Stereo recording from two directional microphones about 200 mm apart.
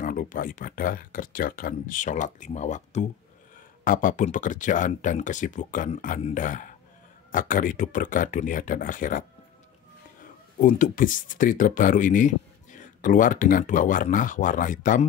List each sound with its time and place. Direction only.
0.0 s speech: 40° left (ahead or behind)
10.2 s speech: 45° left (ahead or behind)